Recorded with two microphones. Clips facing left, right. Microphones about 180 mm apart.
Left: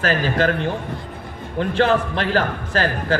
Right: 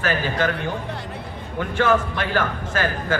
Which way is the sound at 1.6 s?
35° left (ahead or behind).